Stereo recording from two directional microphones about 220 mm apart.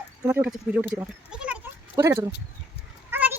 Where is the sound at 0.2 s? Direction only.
10° right (ahead or behind).